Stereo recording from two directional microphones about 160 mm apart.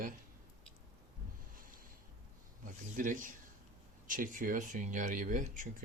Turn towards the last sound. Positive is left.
turn(degrees=-55)  # may be behind; listen again after turning